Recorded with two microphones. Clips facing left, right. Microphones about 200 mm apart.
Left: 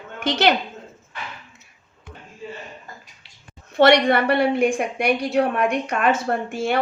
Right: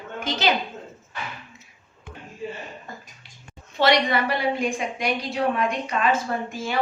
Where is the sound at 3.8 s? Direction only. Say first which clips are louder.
Left 5 dB; 60° left (ahead or behind).